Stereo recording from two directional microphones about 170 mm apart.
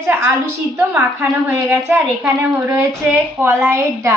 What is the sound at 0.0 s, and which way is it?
A woman's voice, 15° right (ahead or behind).